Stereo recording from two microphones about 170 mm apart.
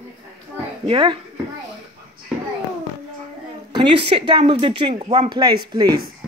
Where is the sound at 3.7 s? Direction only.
30° right (ahead or behind).